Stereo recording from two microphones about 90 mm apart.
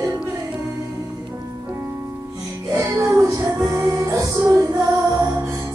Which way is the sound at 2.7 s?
35° right (ahead or behind).